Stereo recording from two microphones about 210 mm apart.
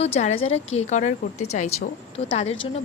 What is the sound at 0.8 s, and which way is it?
A woman's voice, 35° left (ahead or behind).